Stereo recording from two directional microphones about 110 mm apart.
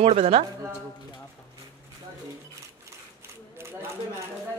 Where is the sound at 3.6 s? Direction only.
20° right (ahead or behind).